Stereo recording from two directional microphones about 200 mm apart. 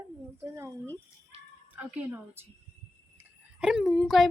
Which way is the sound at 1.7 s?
10° right (ahead or behind).